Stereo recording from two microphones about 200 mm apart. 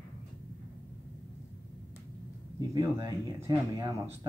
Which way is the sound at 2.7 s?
20° right (ahead or behind).